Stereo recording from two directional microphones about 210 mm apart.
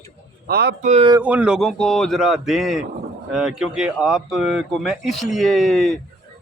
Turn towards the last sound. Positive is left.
turn(degrees=0)  # may be behind; listen again after turning